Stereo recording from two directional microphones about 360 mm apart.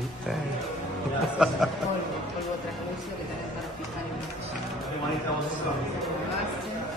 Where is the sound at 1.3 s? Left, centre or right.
Centre.